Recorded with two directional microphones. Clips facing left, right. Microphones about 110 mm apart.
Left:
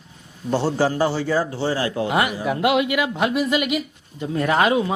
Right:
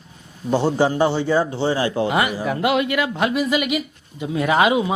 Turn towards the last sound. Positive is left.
turn(degrees=-10)  # may be behind; listen again after turning